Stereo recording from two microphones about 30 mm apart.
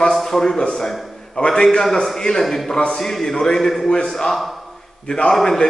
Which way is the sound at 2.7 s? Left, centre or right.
Left.